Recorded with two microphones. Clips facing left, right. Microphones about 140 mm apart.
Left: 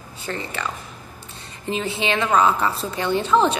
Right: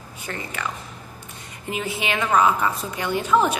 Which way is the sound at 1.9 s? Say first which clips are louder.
Left 3 dB; 25° left (ahead or behind).